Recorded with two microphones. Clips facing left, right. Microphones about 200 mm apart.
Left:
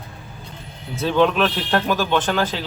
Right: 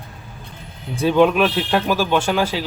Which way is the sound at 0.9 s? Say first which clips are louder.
Right 3 dB; 15° right (ahead or behind).